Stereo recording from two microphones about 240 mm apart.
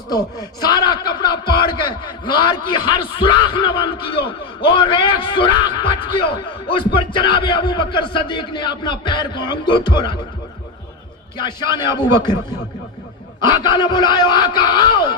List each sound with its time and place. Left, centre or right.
0.1 s speech: centre
11.3 s speech: centre